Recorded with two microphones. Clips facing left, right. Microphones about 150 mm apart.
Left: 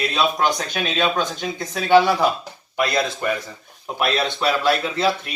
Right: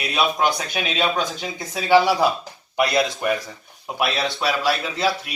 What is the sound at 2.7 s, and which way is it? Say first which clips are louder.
Speech: right 1 dB; 20° right (ahead or behind).